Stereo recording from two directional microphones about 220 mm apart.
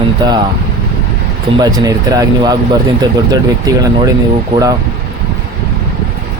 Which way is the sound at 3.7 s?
15° right (ahead or behind).